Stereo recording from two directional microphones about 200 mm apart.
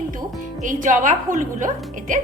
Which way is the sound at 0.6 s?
40° right (ahead or behind).